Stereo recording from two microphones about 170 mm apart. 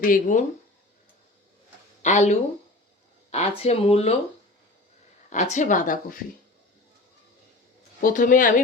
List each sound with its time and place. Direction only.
0.0 s speech: 50° left (ahead or behind)
2.0 s speech: 45° left (ahead or behind)
3.2 s a sound: 40° left (ahead or behind)
3.6 s speech: 35° left (ahead or behind)
5.3 s speech: 45° left (ahead or behind)
8.0 s speech: 50° left (ahead or behind)